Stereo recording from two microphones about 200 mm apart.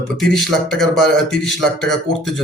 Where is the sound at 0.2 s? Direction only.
Centre (ahead or behind).